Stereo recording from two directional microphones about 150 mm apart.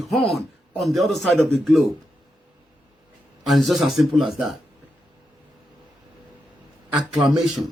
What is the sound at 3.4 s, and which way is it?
Speech, centre (ahead or behind).